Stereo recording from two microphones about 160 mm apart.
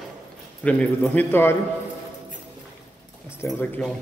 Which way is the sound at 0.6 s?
10° left (ahead or behind).